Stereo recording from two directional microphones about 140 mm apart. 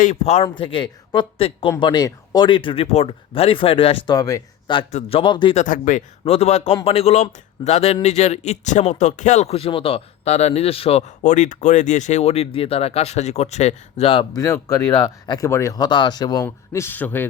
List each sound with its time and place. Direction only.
0.0 s speech: 55° left (ahead or behind)
0.5 s speech: 35° left (ahead or behind)
4.9 s speech: 50° left (ahead or behind)
5.5 s speech: 70° left (ahead or behind)
6.2 s speech: 45° left (ahead or behind)
14.3 s speech: 25° left (ahead or behind)
16.5 s speech: 15° left (ahead or behind)